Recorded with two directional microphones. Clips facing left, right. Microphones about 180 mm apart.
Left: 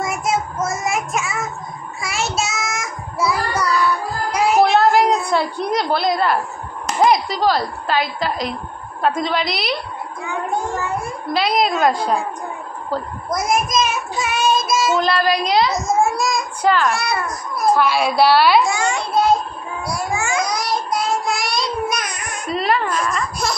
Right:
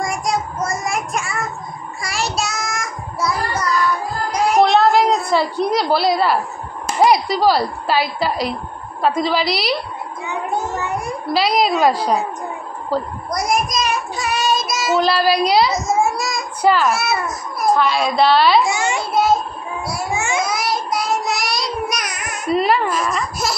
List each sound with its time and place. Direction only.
0.0 s child singing: 5° left (ahead or behind)
4.3 s a sound: 5° left (ahead or behind)
7.0 s a child's voice: 5° right (ahead or behind)
10.7 s cat: 20° right (ahead or behind)
11.3 s a child's voice: centre (ahead or behind)
19.1 s a sound: 5° right (ahead or behind)
20.2 s babbling: 20° right (ahead or behind)
20.4 s child singing: centre (ahead or behind)
22.3 s baby cry: 10° right (ahead or behind)